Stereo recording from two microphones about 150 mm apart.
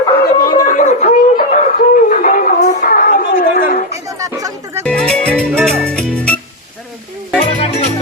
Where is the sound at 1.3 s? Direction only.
60° left (ahead or behind).